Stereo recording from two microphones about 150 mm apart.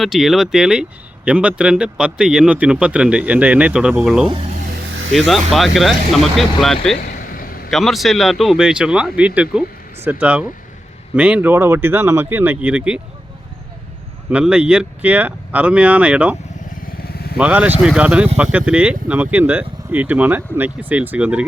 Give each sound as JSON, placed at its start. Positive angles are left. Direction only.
{"t": 0.0, "sound": "speech", "side_deg": 0}
{"t": 4.3, "sound": "speech", "side_deg": -40}
{"t": 5.1, "sound": "speech", "side_deg": 0}
{"t": 7.0, "sound": "vehicle", "side_deg": 70}
{"t": 7.7, "sound": "speech", "side_deg": 0}
{"t": 14.3, "sound": "speech", "side_deg": -5}
{"t": 17.0, "sound": "motorcycle", "side_deg": 90}
{"t": 17.3, "sound": "speech", "side_deg": -10}